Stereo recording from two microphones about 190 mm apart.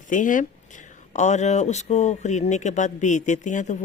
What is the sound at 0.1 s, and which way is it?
Speech, 45° left (ahead or behind).